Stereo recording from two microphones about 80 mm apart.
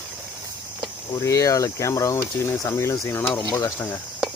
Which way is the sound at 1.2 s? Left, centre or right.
Left.